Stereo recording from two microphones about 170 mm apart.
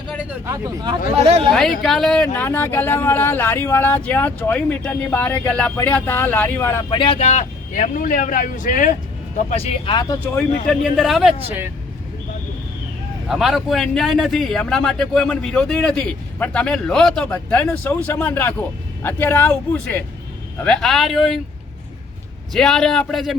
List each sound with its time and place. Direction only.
0.3 s speech: 15° right (ahead or behind)
1.2 s speech: 35° right (ahead or behind)
1.8 s speech: centre (ahead or behind)
6.9 s speech: 30° left (ahead or behind); by 8.9 s 50° left (ahead or behind)
9.5 s speech: 40° left (ahead or behind)
9.9 s speech: 20° left (ahead or behind)
10.7 s a man's voice: centre (ahead or behind)
13.2 s a man's voice: centre (ahead or behind)
22.5 s a man's voice: 5° left (ahead or behind)